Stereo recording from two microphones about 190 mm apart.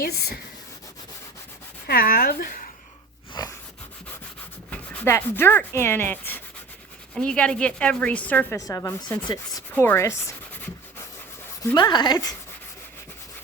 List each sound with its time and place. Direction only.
0.0 s speech: 55° left (ahead or behind)
1.9 s speech: 50° left (ahead or behind)
3.4 s wheeze: 20° left (ahead or behind)
4.7 s a woman's voice: 10° left (ahead or behind)
11.6 s speech: 20° left (ahead or behind)